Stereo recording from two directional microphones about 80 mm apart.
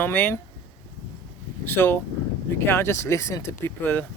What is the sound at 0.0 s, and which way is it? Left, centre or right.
Speech, left.